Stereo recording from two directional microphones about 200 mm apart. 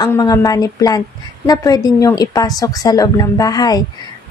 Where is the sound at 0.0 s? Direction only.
20° left (ahead or behind).